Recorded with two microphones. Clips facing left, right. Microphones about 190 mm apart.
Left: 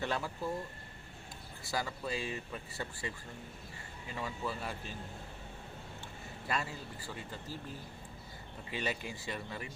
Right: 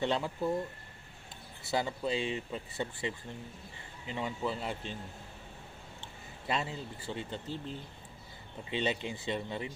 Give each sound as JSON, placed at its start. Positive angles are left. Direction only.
{"t": 0.0, "sound": "speech", "side_deg": -20}
{"t": 1.7, "sound": "speech", "side_deg": -25}
{"t": 6.5, "sound": "speech", "side_deg": -25}